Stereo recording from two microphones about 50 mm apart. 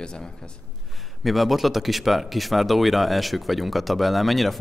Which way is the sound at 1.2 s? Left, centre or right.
Centre.